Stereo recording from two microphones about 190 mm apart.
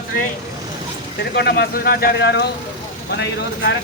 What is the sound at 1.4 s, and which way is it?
Speech, 60° left (ahead or behind).